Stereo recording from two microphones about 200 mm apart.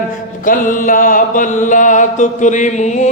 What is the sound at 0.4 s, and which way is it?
Mantra, 45° left (ahead or behind).